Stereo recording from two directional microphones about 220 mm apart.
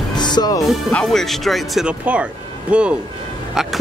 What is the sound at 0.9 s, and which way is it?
Speech, 5° left (ahead or behind).